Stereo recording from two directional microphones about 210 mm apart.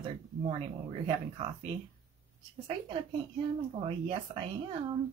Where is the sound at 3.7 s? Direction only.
25° right (ahead or behind).